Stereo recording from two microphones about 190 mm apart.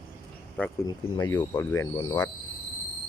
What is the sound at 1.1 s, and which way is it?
Speech, 15° left (ahead or behind).